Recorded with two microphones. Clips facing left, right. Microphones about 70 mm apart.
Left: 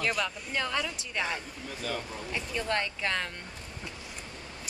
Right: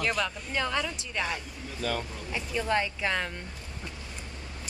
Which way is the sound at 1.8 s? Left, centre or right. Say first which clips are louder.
Right 4 dB; right.